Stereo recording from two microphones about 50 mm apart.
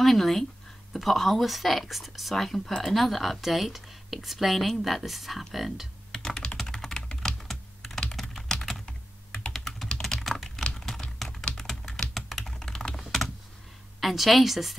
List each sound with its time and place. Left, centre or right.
0.0 s speech: centre
6.1 s computer keyboard: centre
6.6 s typing: centre
7.2 s computer keyboard: centre
9.5 s typing: centre
10.5 s typing: centre
11.2 s typing: centre
13.9 s speech: centre